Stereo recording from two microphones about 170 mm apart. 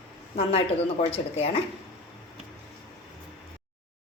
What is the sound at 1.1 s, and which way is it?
Speech, 35° left (ahead or behind).